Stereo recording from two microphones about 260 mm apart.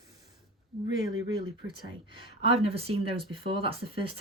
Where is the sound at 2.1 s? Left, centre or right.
Right.